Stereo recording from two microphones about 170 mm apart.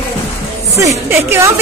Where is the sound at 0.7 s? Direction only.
15° right (ahead or behind).